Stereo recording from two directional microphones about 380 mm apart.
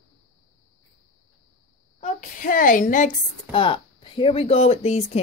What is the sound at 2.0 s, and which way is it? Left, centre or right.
A woman's voice, left.